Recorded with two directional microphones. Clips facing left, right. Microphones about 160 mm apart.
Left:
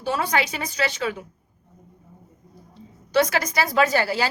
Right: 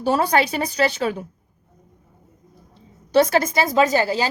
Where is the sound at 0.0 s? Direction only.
40° right (ahead or behind).